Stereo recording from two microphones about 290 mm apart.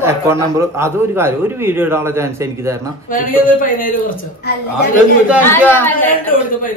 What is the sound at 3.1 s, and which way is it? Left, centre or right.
Speech, left.